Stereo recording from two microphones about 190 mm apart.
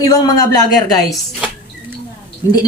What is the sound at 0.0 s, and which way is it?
Speech, 20° left (ahead or behind).